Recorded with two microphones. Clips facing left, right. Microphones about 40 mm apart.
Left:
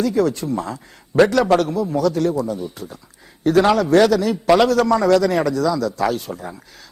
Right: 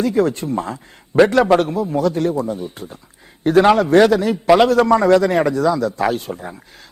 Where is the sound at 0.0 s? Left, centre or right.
Right.